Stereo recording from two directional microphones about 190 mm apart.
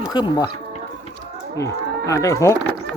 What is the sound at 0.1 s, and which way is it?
Speech, 20° left (ahead or behind).